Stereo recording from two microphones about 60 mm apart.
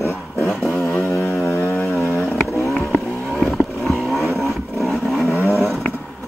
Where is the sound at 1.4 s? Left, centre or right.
Left.